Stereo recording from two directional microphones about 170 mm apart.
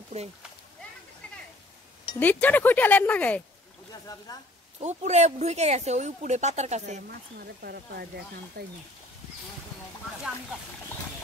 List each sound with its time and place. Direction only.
2.1 s speech: 10° left (ahead or behind)
4.7 s speech: 40° right (ahead or behind)
7.0 s speech: 70° right (ahead or behind)